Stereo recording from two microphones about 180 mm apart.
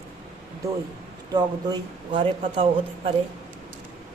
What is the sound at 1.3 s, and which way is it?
Speech, 25° right (ahead or behind).